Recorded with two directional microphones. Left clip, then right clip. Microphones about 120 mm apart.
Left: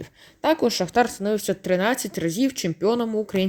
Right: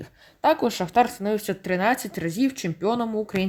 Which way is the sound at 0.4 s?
15° left (ahead or behind).